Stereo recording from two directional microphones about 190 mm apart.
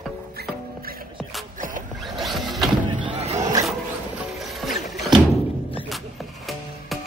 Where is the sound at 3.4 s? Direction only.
20° right (ahead or behind).